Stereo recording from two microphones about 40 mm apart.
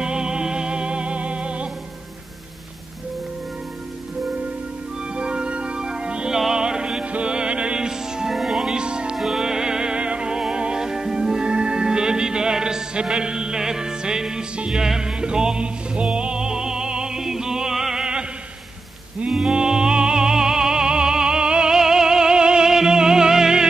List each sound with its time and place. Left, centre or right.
0.0 s music: right
5.1 s music: right
8.3 s music: centre
9.1 s music: centre
19.3 s music: centre